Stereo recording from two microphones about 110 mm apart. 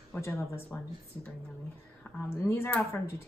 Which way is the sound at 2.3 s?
25° left (ahead or behind).